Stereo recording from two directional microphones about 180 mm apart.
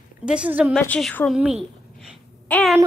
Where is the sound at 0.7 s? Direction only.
5° left (ahead or behind).